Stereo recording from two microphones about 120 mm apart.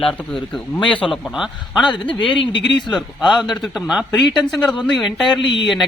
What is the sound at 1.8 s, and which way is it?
Speech, 40° left (ahead or behind).